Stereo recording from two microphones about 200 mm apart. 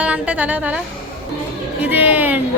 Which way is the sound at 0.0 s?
5° right (ahead or behind).